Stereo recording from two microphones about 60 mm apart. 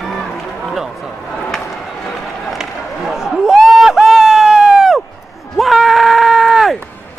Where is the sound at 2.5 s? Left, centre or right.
Centre.